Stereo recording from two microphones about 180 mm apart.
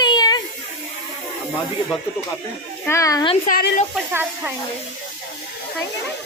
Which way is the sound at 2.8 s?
15° left (ahead or behind).